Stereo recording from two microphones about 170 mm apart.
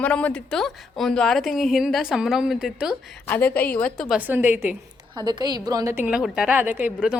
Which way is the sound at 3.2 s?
10° left (ahead or behind).